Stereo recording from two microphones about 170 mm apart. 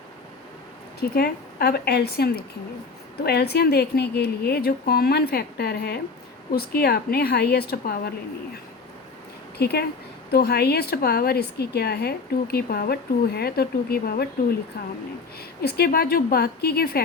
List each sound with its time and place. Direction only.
0.9 s a woman's voice: 65° left (ahead or behind)
9.6 s a woman's voice: 75° left (ahead or behind)
15.4 s a woman's voice: 70° left (ahead or behind)